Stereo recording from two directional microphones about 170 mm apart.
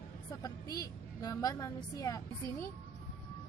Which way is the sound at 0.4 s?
20° left (ahead or behind).